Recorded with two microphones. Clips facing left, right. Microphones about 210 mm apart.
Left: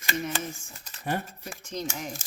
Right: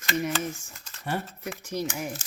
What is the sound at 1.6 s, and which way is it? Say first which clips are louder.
Speech: right 3 dB; 10° right (ahead or behind).